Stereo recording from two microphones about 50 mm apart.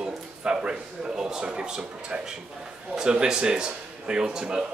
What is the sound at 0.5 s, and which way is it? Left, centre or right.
A man's voice, centre.